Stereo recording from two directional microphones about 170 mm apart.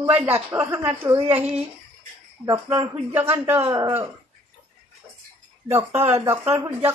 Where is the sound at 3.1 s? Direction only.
10° right (ahead or behind).